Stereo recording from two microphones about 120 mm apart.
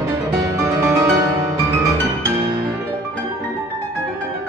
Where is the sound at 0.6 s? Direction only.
25° right (ahead or behind).